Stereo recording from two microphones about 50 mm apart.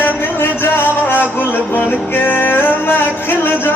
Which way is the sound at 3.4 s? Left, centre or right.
Left.